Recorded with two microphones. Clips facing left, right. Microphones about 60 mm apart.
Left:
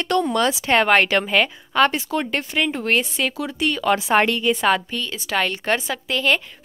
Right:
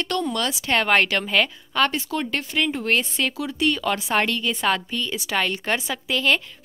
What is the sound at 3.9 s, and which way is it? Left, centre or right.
Speech, centre.